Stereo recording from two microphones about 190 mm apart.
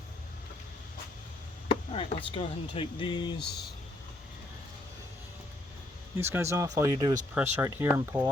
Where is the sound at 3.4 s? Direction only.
60° left (ahead or behind).